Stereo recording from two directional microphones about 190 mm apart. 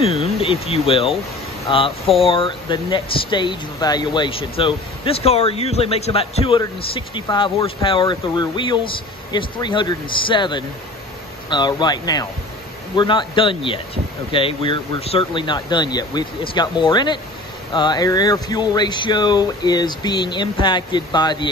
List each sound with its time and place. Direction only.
0.0 s speech: 30° left (ahead or behind)